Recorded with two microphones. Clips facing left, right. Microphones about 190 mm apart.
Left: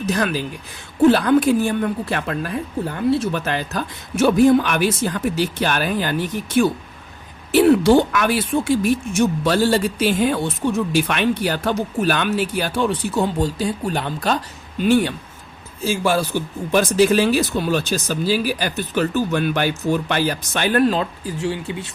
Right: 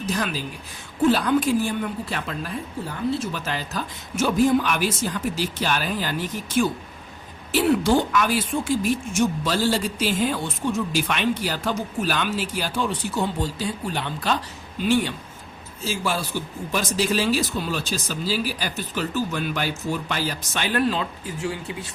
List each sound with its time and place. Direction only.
0.1 s a woman's voice: 65° left (ahead or behind)
13.9 s speech: 45° left (ahead or behind)
21.4 s speech: 25° left (ahead or behind)